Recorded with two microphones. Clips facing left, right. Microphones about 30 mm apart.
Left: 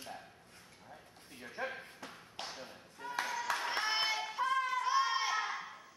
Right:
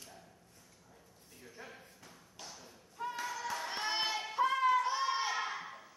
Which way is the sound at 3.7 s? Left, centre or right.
Centre.